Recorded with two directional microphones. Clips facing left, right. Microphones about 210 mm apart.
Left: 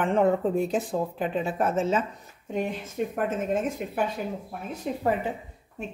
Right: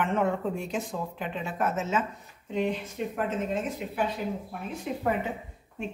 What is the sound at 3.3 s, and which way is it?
Speech, 50° left (ahead or behind).